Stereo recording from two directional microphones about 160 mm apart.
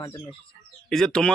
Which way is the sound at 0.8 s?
5° left (ahead or behind).